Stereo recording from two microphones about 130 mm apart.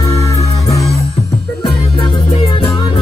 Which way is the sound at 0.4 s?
25° left (ahead or behind).